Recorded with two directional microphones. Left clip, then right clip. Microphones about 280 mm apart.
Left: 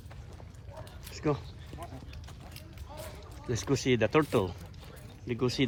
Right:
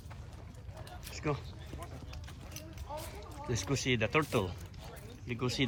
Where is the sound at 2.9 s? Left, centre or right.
Right.